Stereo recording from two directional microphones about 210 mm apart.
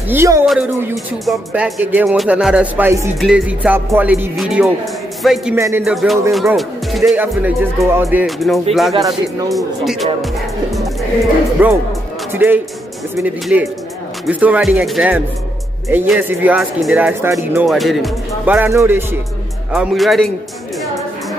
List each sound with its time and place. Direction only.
0.1 s speech: 10° right (ahead or behind)
5.6 s speech: 15° right (ahead or behind)
6.3 s speech: centre (ahead or behind)
8.9 s speech: 15° right (ahead or behind)
9.5 s speech: centre (ahead or behind)
19.7 s speech: centre (ahead or behind)